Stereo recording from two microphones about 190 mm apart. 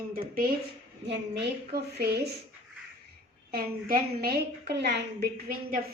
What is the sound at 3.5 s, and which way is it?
A woman's voice, 50° right (ahead or behind).